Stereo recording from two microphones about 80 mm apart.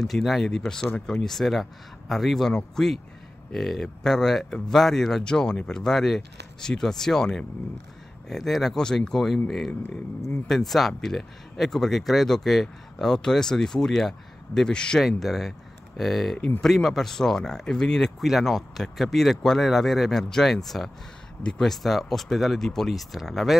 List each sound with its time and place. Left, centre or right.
0.0 s speech: centre
16.3 s speech: left
16.6 s speech: centre